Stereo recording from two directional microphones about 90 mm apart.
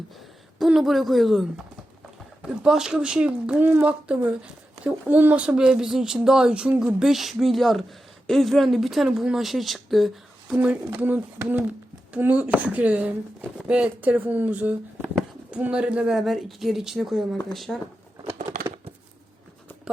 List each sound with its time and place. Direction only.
0.6 s speech: centre (ahead or behind)
10.5 s speech: 15° right (ahead or behind)
16.1 s speech: centre (ahead or behind)